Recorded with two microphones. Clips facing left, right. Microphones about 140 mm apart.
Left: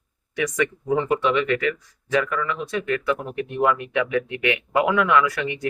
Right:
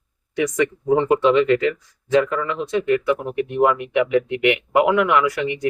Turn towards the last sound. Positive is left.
turn(degrees=-20)  # may be behind; listen again after turning